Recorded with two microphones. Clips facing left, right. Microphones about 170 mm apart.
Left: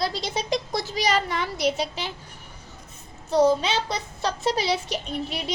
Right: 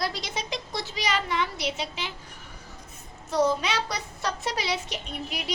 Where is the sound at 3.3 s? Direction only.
30° left (ahead or behind).